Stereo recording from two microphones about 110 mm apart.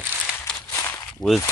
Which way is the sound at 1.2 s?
35° left (ahead or behind).